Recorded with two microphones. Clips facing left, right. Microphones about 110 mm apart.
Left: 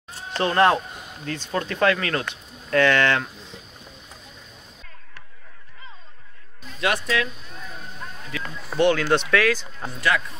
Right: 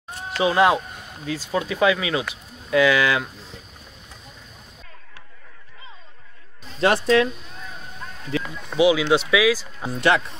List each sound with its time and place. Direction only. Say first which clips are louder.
0.4 s speech: right 1 dB; 5° right (ahead or behind)
6.7 s speech: right 6 dB; 35° right (ahead or behind)
8.5 s speech: right 1 dB; centre (ahead or behind)
9.9 s speech: right 4 dB; 25° right (ahead or behind)